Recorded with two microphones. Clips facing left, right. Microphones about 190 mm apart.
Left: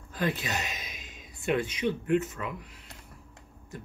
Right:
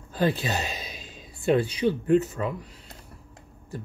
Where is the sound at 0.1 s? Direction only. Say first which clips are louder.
Right 5 dB; 30° right (ahead or behind).